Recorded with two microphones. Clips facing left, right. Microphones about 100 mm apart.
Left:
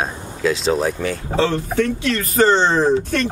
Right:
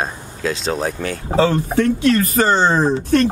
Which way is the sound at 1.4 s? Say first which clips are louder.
Right 3 dB; 45° right (ahead or behind).